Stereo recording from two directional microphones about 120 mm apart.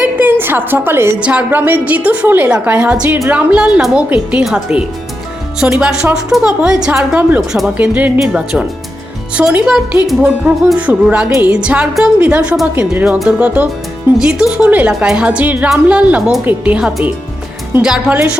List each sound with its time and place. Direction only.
0.0 s a sound: 15° right (ahead or behind)
1.2 s speech: 15° right (ahead or behind)
7.5 s speech: 5° right (ahead or behind)
7.9 s speech: 15° right (ahead or behind)